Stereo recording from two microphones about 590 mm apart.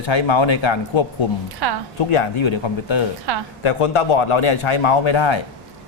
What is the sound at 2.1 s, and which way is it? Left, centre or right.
A man's voice, left.